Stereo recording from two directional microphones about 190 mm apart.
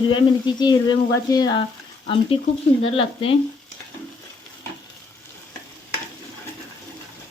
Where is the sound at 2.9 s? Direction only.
30° left (ahead or behind).